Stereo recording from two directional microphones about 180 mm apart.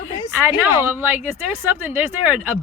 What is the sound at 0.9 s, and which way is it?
Speech, 10° right (ahead or behind).